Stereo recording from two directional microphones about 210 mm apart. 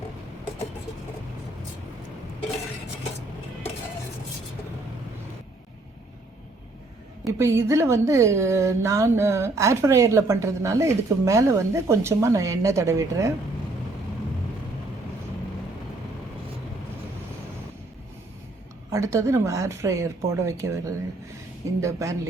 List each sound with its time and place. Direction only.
7.3 s speech: 15° right (ahead or behind)
18.9 s speech: 15° right (ahead or behind)